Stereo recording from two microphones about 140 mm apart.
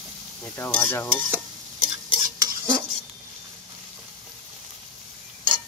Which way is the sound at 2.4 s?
20° right (ahead or behind).